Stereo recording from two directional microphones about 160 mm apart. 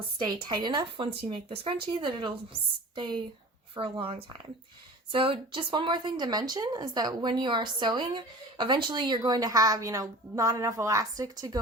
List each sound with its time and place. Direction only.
0.4 s a woman's voice: 30° right (ahead or behind)